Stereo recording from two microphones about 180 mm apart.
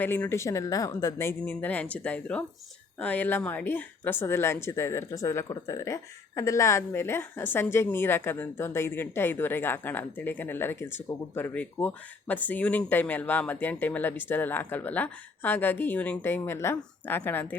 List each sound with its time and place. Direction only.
0.0 s speech: 10° left (ahead or behind)